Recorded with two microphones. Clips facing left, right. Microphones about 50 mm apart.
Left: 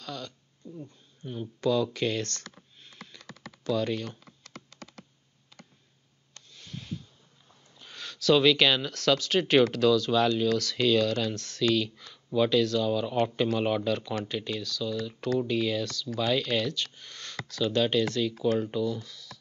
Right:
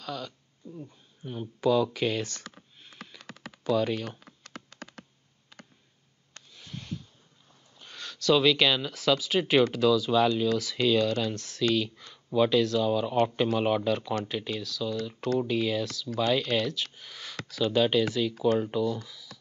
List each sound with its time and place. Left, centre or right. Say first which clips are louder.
0.0 s speech: right 2 dB; centre
4.2 s computer keyboard: right 2 dB; right
6.5 s a sound: even; centre
7.8 s speech: left 1 dB; centre